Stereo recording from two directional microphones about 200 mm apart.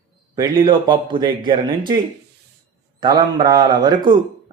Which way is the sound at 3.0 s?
20° right (ahead or behind).